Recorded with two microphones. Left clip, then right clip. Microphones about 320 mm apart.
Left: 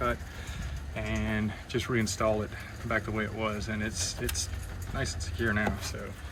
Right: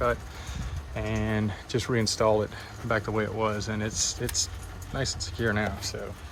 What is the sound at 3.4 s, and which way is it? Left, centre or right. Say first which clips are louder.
Speech: right 4 dB; centre.